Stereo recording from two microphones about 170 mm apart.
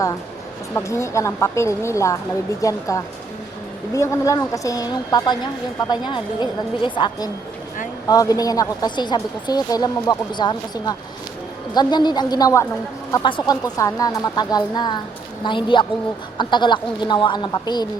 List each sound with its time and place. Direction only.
0.7 s speech: 15° left (ahead or behind)